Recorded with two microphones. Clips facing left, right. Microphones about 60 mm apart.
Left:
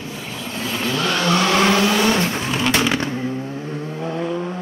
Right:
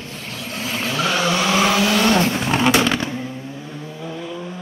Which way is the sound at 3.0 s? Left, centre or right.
Left.